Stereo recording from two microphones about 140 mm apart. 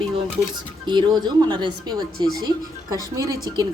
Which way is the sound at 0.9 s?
30° right (ahead or behind).